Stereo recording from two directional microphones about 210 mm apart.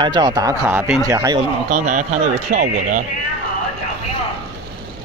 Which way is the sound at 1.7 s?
40° right (ahead or behind).